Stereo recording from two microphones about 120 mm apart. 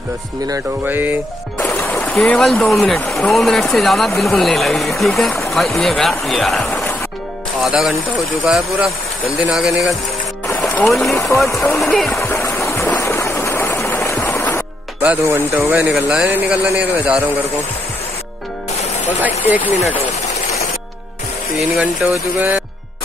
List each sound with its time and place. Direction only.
0.8 s speech: 15° right (ahead or behind)
1.6 s music: 15° left (ahead or behind)
2.2 s speech: 5° left (ahead or behind)
6.7 s music: 20° left (ahead or behind)
7.6 s speech: centre (ahead or behind)
11.1 s speech: 25° left (ahead or behind)
11.9 s speech: 5° left (ahead or behind)
12.2 s a sound: 20° left (ahead or behind)
15.0 s speech: 15° right (ahead or behind)
19.2 s speech: 15° right (ahead or behind)
21.5 s speech: centre (ahead or behind)